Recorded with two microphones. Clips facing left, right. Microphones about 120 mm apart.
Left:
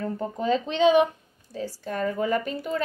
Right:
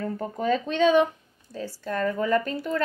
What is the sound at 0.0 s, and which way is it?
Speech, 20° left (ahead or behind).